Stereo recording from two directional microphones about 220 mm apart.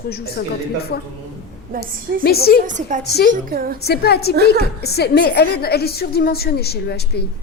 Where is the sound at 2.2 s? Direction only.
45° left (ahead or behind).